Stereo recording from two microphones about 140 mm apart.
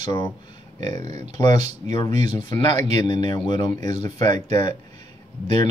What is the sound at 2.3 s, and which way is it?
Speech, 30° left (ahead or behind).